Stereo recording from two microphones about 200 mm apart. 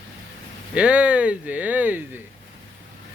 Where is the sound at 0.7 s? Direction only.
5° right (ahead or behind).